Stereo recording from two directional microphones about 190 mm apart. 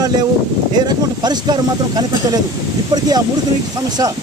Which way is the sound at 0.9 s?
20° right (ahead or behind).